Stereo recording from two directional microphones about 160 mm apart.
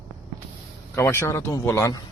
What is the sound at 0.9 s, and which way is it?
Speech, 15° left (ahead or behind).